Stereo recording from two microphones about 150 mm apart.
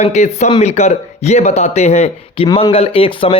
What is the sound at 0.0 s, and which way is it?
Speech, 50° left (ahead or behind).